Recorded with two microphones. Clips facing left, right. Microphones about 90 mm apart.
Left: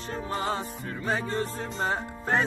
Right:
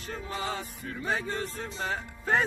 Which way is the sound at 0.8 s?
40° left (ahead or behind).